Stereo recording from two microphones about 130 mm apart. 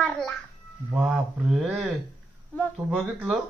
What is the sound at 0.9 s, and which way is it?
Speech, 5° right (ahead or behind).